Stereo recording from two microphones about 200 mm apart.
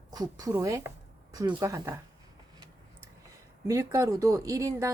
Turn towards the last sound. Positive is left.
turn(degrees=-15)  # may be behind; listen again after turning